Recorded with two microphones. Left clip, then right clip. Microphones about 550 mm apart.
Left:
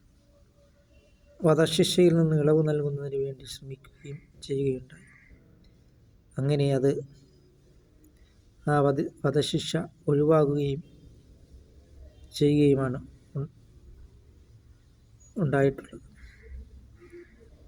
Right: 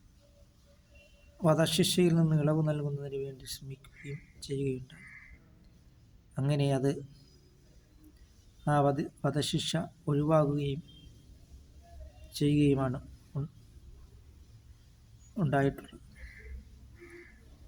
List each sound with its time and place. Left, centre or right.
1.5 s a man's voice: right
6.3 s a man's voice: right
8.6 s a man's voice: right
12.3 s a man's voice: right
15.4 s a man's voice: right